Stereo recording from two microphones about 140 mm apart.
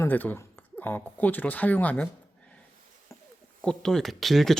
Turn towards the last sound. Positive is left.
turn(degrees=0)  # may be behind; listen again after turning